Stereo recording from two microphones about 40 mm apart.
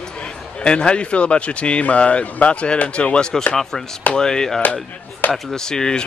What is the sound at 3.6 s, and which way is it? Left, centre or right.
Speech, centre.